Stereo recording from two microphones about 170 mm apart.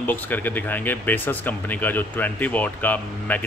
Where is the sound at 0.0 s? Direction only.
10° left (ahead or behind).